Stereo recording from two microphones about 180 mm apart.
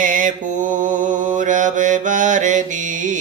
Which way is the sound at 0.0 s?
45° right (ahead or behind).